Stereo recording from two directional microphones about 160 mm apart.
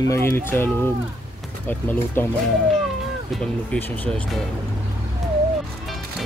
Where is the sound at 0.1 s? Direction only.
15° left (ahead or behind).